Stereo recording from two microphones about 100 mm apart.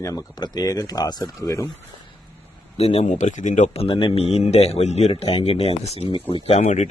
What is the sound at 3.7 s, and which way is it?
Speech, 70° left (ahead or behind).